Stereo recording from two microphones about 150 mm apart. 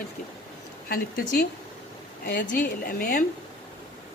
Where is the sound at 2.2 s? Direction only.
90° left.